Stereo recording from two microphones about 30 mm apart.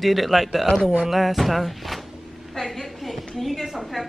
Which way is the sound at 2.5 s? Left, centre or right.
Centre.